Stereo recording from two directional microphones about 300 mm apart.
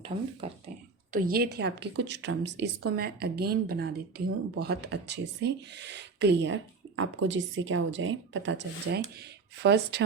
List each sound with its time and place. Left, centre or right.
0.4 s speech: centre
1.1 s speech: right